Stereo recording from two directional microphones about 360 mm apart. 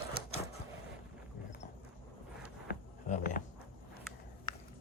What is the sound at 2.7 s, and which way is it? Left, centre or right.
Music, left.